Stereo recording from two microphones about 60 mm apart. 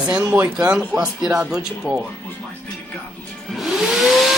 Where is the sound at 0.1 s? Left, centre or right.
Centre.